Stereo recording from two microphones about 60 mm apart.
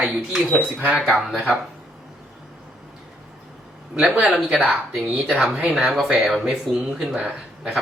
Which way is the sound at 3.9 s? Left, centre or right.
Centre.